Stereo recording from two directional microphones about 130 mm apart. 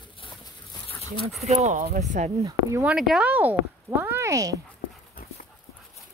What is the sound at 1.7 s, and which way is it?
Speech, 75° right (ahead or behind).